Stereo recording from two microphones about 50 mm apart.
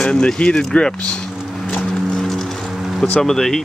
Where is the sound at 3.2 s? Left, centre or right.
Centre.